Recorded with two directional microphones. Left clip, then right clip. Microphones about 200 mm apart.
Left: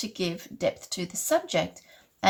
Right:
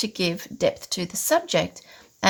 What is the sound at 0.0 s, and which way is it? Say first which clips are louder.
A woman's voice: right 6 dB; 45° right (ahead or behind).